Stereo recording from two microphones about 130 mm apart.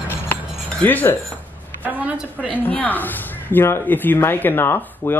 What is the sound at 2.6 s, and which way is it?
Speech, 10° left (ahead or behind).